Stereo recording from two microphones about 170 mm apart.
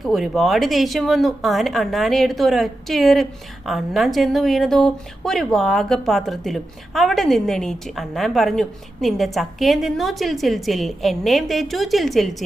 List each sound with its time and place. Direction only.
0.0 s speech: centre (ahead or behind)